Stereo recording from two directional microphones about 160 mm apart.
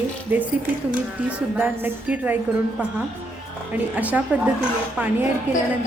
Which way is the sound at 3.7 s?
10° right (ahead or behind).